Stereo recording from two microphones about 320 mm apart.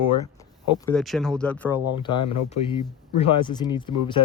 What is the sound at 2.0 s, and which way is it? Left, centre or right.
Speech, centre.